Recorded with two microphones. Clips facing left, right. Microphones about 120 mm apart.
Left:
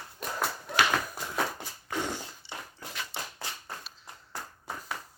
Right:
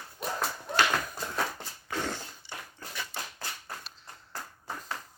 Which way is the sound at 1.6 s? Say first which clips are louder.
Left 1 dB; 15° left (ahead or behind).